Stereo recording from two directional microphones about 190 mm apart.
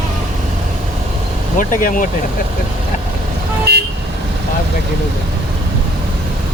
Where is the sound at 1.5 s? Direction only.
45° left (ahead or behind).